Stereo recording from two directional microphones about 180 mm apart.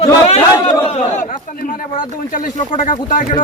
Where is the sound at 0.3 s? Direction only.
35° left (ahead or behind).